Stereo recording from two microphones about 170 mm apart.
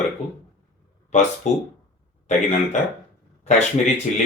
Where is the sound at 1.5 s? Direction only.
40° left (ahead or behind).